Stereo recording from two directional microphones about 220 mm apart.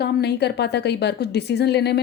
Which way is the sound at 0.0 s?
50° left (ahead or behind).